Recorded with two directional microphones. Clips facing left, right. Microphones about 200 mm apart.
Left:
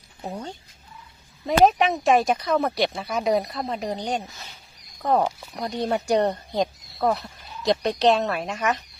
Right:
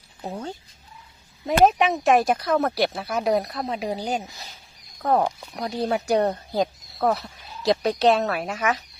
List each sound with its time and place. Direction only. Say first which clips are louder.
0.2 s speech: right 1 dB; centre (ahead or behind)
4.3 s speech: right 1 dB; 35° right (ahead or behind)
5.0 s speech: even; centre (ahead or behind)